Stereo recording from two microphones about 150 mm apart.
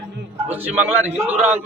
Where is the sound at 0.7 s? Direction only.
10° right (ahead or behind).